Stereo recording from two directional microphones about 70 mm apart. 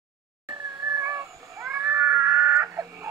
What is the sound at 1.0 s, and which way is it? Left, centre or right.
Cat, right.